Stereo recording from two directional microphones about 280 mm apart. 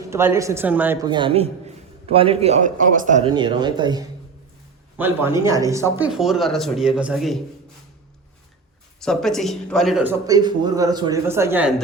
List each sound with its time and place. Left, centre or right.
0.1 s a man's voice: centre
9.0 s a man's voice: centre